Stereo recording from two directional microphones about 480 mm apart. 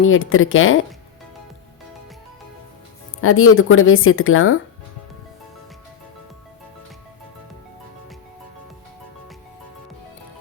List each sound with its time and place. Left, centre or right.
0.0 s speech: left
3.2 s speech: left